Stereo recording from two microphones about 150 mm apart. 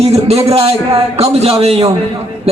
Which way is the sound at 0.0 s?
45° right (ahead or behind).